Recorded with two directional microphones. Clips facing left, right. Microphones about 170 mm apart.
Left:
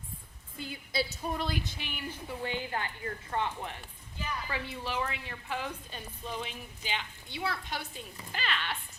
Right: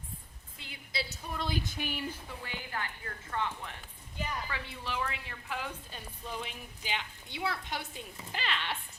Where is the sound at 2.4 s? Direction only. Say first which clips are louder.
Left 6 dB; 25° left (ahead or behind).